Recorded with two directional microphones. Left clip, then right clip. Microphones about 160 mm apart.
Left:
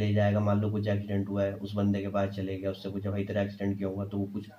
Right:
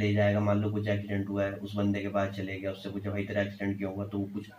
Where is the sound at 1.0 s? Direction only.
75° left (ahead or behind).